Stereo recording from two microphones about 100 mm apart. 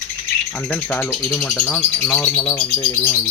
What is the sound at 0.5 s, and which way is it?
Speech, 15° left (ahead or behind).